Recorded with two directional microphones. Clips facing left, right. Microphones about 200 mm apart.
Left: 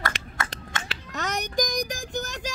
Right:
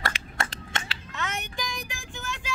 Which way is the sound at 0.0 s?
30° right (ahead or behind).